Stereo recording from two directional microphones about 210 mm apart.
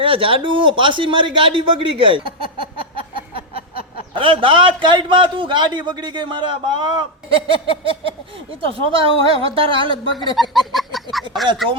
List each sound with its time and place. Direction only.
0.0 s a man's voice: 25° right (ahead or behind)
4.1 s a man's voice: 25° right (ahead or behind)
10.3 s a sound: centre (ahead or behind)